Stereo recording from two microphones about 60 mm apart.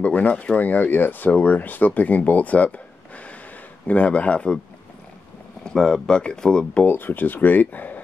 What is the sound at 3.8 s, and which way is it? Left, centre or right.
Speech, left.